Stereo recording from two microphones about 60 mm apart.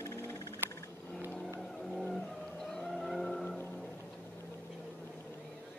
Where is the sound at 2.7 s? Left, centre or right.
Centre.